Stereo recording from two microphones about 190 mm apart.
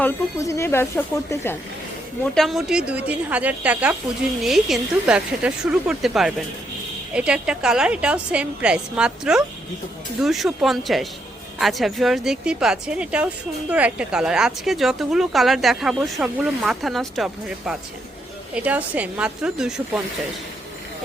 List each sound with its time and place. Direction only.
0.0 s speech: 15° left (ahead or behind)
2.2 s a woman's voice: centre (ahead or behind)